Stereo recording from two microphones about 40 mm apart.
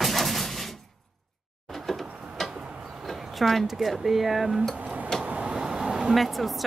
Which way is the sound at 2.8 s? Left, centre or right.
Centre.